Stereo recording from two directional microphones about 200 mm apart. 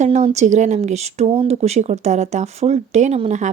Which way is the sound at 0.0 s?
35° right (ahead or behind).